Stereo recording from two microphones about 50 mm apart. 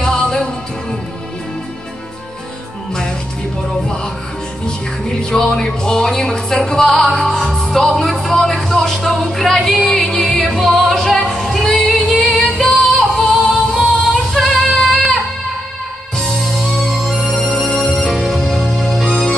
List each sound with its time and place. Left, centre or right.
0.0 s music: centre
4.6 s speech: centre
7.6 s music: centre
10.9 s female singing: centre
12.2 s music: centre
13.3 s yodeling: centre
14.3 s female singing: centre
16.2 s music: centre